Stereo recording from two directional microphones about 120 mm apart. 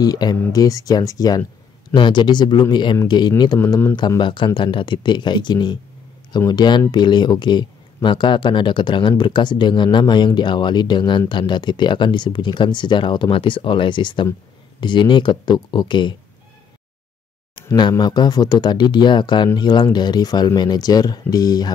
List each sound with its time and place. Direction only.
0.0 s speech: 30° left (ahead or behind)
17.7 s speech: 40° left (ahead or behind)